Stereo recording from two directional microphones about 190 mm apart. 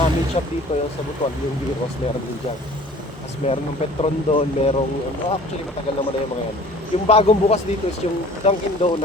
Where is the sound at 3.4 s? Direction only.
30° left (ahead or behind).